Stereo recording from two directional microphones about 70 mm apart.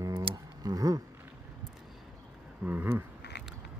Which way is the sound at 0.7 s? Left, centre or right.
Right.